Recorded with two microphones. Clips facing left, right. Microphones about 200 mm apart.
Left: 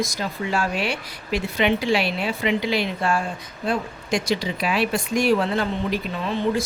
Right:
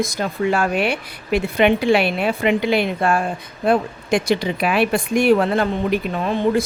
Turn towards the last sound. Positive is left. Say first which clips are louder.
# right 5 dB
turn(degrees=-55)  # may be behind; listen again after turning